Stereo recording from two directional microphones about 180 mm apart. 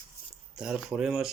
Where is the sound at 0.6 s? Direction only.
5° right (ahead or behind).